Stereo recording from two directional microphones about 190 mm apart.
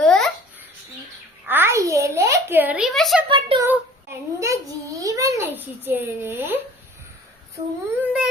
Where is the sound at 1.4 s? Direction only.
10° right (ahead or behind).